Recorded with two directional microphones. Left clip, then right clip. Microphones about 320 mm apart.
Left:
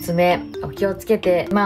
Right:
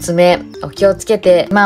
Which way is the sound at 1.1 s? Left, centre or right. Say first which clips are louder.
Right 7 dB; right.